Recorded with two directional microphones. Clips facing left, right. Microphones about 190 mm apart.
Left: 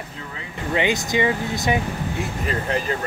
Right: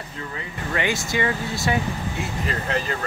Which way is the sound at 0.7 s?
20° left (ahead or behind).